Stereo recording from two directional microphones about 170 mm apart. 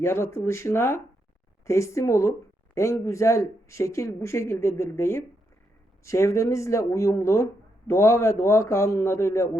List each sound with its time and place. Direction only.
0.0 s speech: 15° left (ahead or behind)